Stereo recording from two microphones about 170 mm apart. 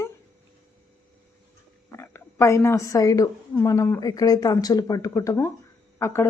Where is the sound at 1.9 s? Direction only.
15° left (ahead or behind).